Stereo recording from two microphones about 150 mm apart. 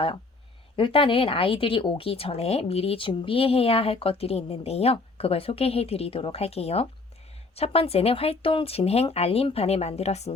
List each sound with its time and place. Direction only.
0.8 s speech: 35° left (ahead or behind)